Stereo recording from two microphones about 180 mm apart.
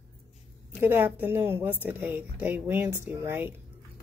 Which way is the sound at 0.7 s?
10° right (ahead or behind).